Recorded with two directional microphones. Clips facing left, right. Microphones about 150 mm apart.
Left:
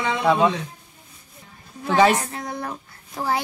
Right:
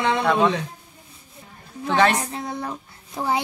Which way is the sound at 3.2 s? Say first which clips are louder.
Right 1 dB; 20° right (ahead or behind).